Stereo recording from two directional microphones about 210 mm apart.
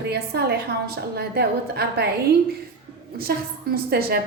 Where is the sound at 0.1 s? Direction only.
50° right (ahead or behind).